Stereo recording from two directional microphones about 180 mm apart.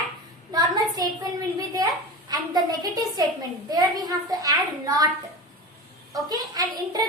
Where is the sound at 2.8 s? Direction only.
20° right (ahead or behind).